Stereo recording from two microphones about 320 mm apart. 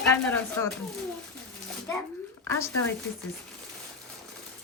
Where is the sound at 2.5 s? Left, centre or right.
Centre.